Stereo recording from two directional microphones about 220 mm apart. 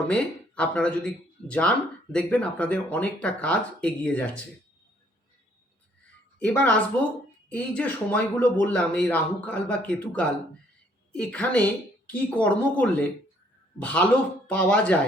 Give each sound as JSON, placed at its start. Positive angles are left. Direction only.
{"t": 0.1, "sound": "speech", "side_deg": 5}
{"t": 6.4, "sound": "speech", "side_deg": 5}